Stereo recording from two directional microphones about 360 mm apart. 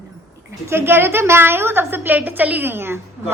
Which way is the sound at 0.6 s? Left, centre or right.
Centre.